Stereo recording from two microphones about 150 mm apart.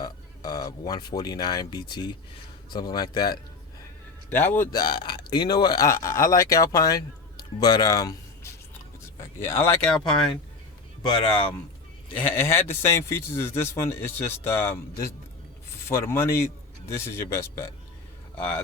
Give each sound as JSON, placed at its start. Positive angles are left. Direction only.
{"t": 0.0, "sound": "speech", "side_deg": 25}
{"t": 4.3, "sound": "a man's voice", "side_deg": 10}
{"t": 4.7, "sound": "a man's voice", "side_deg": 25}
{"t": 12.1, "sound": "a man's voice", "side_deg": 15}